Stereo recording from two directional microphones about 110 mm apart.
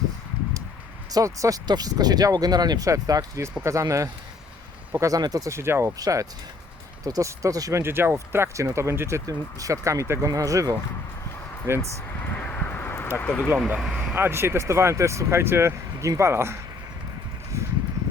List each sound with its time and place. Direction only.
1.1 s speech: 30° right (ahead or behind)
12.2 s a sound: 15° left (ahead or behind)
13.2 s speech: 10° left (ahead or behind)
13.7 s speech: 5° right (ahead or behind)
14.2 s speech: 20° right (ahead or behind)
17.5 s a sound: 25° right (ahead or behind)